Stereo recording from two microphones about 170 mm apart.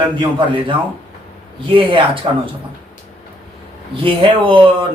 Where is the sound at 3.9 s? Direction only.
30° right (ahead or behind).